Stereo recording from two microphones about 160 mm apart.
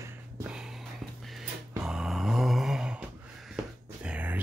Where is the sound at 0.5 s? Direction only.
5° right (ahead or behind).